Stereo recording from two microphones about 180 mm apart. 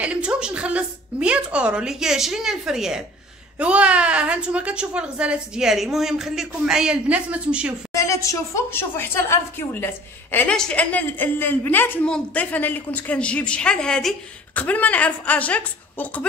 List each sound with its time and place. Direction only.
0.0 s a woman's voice: 5° right (ahead or behind)
7.9 s a woman's voice: 15° left (ahead or behind)